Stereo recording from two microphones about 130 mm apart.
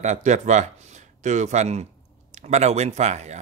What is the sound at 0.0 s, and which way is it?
A man's voice, 65° right (ahead or behind).